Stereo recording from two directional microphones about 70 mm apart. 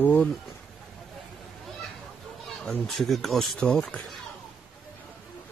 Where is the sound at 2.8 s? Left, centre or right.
Centre.